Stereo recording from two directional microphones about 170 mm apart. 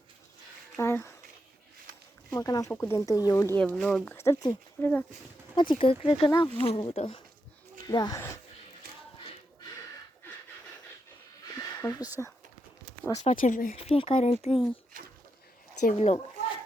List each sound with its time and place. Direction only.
0.8 s speech: 15° left (ahead or behind)
2.3 s speech: 20° left (ahead or behind)
5.5 s speech: 30° left (ahead or behind)
11.4 s a sound: 20° left (ahead or behind)
13.1 s speech: 45° left (ahead or behind)
13.7 s speech: 35° left (ahead or behind)
15.8 s speech: 45° left (ahead or behind)